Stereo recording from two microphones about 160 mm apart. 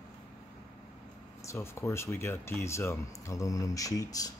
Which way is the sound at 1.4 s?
15° left (ahead or behind).